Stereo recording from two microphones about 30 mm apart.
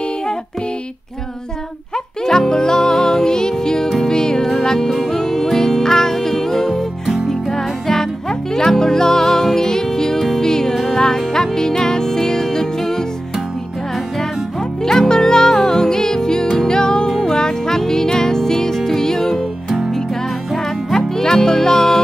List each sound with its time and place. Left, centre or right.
2.2 s music: centre
14.8 s music: centre
20.5 s music: centre